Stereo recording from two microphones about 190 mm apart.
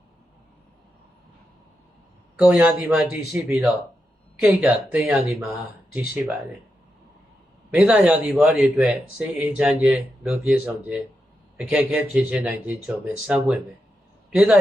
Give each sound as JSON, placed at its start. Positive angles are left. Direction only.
{"t": 2.4, "sound": "speech", "side_deg": -5}
{"t": 7.7, "sound": "a man's voice", "side_deg": -5}